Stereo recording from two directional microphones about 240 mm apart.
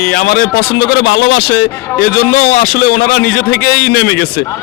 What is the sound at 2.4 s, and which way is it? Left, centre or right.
A man's voice, left.